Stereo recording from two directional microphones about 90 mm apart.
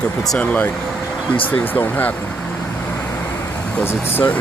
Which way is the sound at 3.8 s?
25° left (ahead or behind).